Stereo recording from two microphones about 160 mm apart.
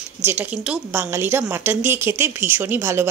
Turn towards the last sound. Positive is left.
turn(degrees=-15)  # may be behind; listen again after turning